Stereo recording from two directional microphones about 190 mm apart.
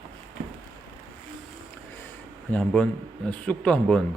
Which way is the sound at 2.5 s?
5° left (ahead or behind).